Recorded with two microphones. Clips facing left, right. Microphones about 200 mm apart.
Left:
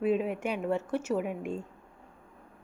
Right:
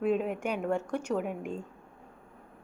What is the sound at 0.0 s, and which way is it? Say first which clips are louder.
A woman's voice: left 1 dB; 5° left (ahead or behind).